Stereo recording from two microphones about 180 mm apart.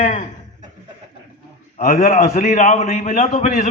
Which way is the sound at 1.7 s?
45° left (ahead or behind).